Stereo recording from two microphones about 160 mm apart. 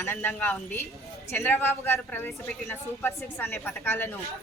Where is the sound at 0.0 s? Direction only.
15° left (ahead or behind).